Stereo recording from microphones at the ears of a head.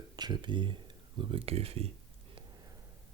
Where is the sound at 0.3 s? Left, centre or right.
Right.